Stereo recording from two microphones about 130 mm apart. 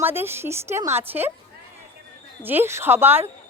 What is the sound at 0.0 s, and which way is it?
Speech, 15° right (ahead or behind).